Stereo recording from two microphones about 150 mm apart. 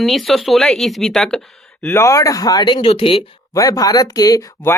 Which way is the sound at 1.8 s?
20° left (ahead or behind).